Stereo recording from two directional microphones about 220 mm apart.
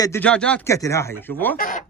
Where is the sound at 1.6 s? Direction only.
35° left (ahead or behind).